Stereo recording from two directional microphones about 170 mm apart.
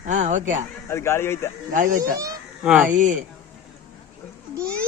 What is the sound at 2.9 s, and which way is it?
Speech, 50° right (ahead or behind).